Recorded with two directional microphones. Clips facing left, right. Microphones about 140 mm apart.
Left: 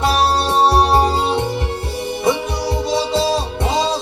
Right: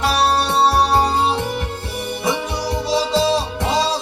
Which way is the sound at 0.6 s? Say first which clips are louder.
Left 2 dB; 25° left (ahead or behind).